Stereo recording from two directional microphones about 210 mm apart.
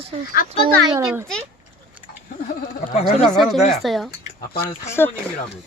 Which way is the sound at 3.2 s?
Centre (ahead or behind).